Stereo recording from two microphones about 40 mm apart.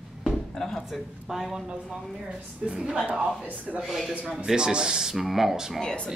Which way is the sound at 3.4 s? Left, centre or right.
Right.